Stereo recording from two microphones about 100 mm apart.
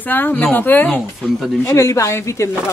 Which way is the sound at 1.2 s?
5° right (ahead or behind).